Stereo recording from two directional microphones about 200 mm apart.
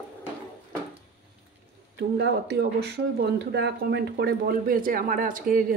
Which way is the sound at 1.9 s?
55° right (ahead or behind).